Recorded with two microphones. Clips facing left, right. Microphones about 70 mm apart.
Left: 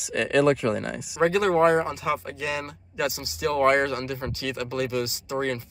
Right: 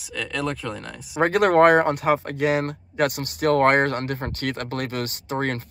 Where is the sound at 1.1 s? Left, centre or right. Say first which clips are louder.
Right 4 dB; right.